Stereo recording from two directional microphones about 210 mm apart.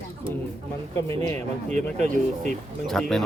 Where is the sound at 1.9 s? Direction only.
35° right (ahead or behind).